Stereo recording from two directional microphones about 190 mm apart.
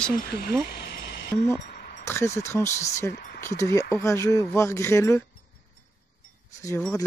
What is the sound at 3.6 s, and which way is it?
Speech, 15° left (ahead or behind).